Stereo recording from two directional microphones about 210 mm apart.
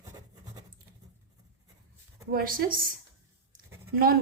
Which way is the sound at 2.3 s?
45° right (ahead or behind).